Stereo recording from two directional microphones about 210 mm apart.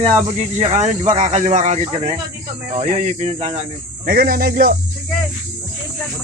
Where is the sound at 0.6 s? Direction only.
35° right (ahead or behind).